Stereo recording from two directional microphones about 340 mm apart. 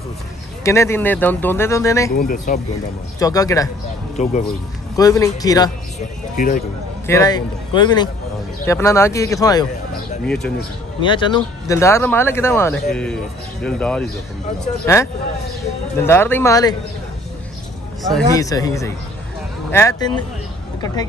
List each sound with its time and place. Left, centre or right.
0.7 s speech: centre
2.1 s speech: left
3.2 s speech: centre
4.2 s speech: centre
6.3 s speech: left
7.1 s speech: centre
11.0 s speech: centre
18.3 s speech: centre